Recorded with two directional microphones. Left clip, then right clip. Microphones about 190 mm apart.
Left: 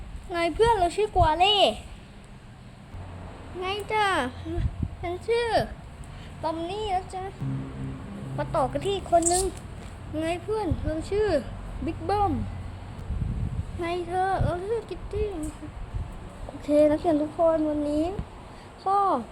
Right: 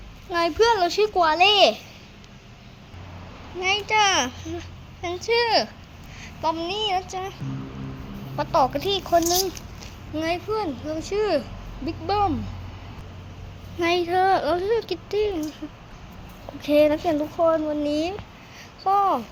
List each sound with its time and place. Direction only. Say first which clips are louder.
0.3 s a child's voice: right 3 dB; 5° right (ahead or behind)
3.6 s a child's voice: right 6 dB; 15° right (ahead or behind)
5.0 s a child's voice: right 4 dB; 10° right (ahead or behind)
6.4 s speech: right 5 dB; 25° right (ahead or behind)
8.4 s a child's voice: right 5 dB; 15° right (ahead or behind)
10.2 s a child's voice: right 3 dB; 15° right (ahead or behind)
13.7 s speech: right 7 dB; 30° right (ahead or behind)
16.6 s a child's voice: right 2 dB; 15° right (ahead or behind)
17.4 s speech: right 3 dB; 40° right (ahead or behind)
18.8 s speech: right 3 dB; 20° right (ahead or behind)